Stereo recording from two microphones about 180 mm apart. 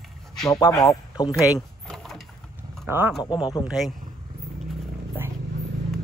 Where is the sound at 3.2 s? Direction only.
25° left (ahead or behind).